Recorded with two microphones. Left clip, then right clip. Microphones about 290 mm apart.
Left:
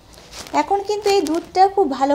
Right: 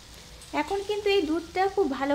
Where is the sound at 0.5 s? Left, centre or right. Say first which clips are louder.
Left 9 dB; centre.